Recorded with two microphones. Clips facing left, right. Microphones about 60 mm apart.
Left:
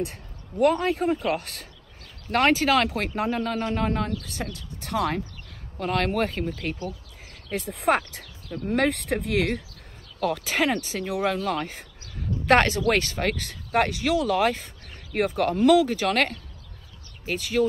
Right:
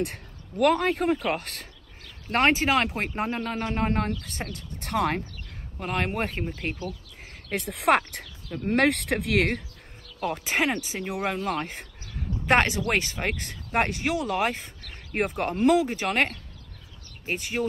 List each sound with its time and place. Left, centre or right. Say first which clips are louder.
0.0 s speech: right 1 dB; right
2.3 s speech: left 2 dB; right
5.8 s speech: left 4 dB; centre
7.5 s speech: even; right
7.9 s speech: right 2 dB; right
10.2 s speech: left 2 dB; right